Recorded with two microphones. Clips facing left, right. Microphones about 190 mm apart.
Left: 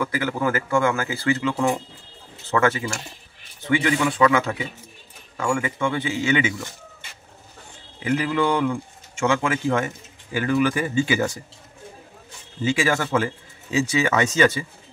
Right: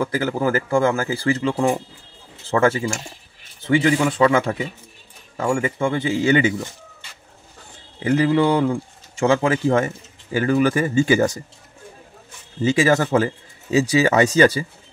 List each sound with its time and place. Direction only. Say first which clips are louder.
0.0 s speech: right 3 dB; 35° right (ahead or behind)
8.0 s speech: right 5 dB; 35° right (ahead or behind)
12.6 s speech: right 5 dB; 40° right (ahead or behind)